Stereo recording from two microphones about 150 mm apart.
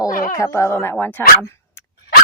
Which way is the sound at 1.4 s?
20° left (ahead or behind).